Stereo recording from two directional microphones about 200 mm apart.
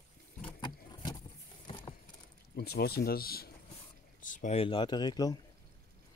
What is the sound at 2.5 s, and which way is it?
Speech, 55° left (ahead or behind).